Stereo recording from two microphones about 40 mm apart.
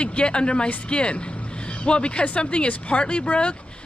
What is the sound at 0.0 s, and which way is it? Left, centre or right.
Speech, left.